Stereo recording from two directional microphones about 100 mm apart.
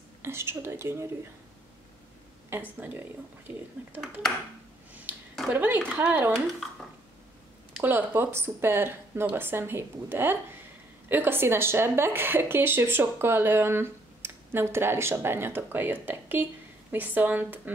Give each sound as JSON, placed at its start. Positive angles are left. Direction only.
{"t": 0.2, "sound": "speech", "side_deg": -25}
{"t": 2.5, "sound": "speech", "side_deg": -20}
{"t": 5.5, "sound": "speech", "side_deg": -20}
{"t": 7.8, "sound": "speech", "side_deg": -20}